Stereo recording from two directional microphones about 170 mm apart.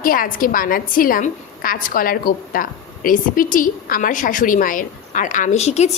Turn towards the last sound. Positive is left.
turn(degrees=40)  # may be behind; listen again after turning